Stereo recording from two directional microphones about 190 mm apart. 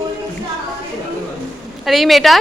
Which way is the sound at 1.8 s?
Centre (ahead or behind).